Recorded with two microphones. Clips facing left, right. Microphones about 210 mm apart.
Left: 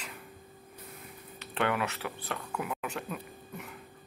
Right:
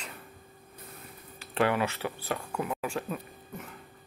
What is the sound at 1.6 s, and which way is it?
Speech, 30° right (ahead or behind).